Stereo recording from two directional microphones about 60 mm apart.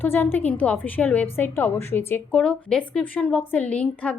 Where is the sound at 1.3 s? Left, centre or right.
Left.